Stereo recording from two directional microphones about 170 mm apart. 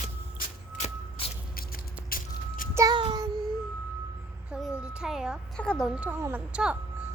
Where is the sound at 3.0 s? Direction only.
25° right (ahead or behind).